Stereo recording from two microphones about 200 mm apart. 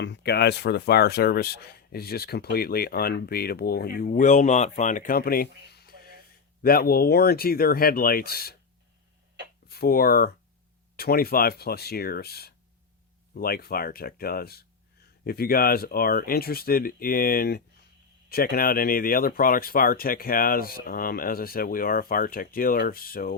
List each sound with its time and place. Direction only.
0.0 s speech: 60° left (ahead or behind)
9.6 s speech: 50° left (ahead or behind)